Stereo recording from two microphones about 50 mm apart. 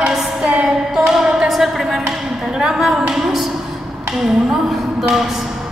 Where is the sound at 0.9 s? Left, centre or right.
Centre.